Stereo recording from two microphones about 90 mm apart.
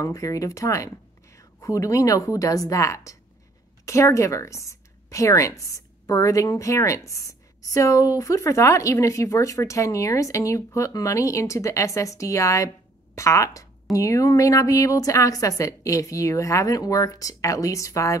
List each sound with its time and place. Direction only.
0.0 s speech: 40° left (ahead or behind)